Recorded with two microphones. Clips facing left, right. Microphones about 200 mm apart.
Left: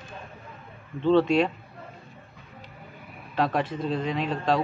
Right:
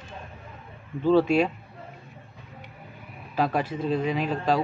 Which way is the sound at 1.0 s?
5° right (ahead or behind).